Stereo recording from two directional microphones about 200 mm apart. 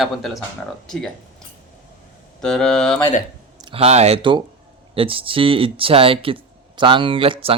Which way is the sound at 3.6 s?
30° right (ahead or behind).